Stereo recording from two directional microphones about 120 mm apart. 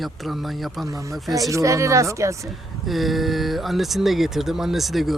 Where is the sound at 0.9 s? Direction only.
30° right (ahead or behind).